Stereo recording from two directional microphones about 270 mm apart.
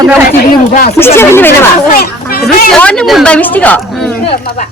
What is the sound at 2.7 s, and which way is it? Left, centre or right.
Speech, centre.